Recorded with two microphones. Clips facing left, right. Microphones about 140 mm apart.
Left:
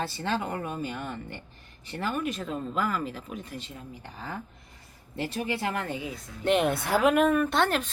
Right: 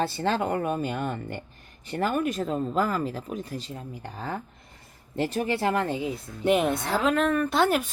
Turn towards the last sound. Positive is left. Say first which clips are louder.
# right 3 dB
turn(degrees=-10)  # may be behind; listen again after turning